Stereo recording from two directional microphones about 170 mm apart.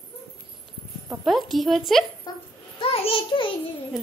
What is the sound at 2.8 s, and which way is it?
Speech, 35° left (ahead or behind).